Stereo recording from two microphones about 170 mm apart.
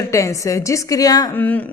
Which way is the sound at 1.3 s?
10° left (ahead or behind).